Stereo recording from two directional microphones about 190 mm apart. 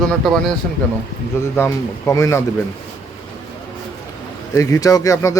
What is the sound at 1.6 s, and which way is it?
Speech, 15° left (ahead or behind).